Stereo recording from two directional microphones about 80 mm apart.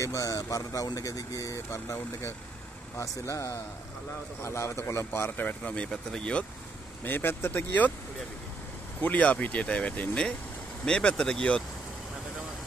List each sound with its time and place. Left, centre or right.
0.0 s speech: left
5.6 s speech: centre
7.1 s speech: left
9.0 s speech: centre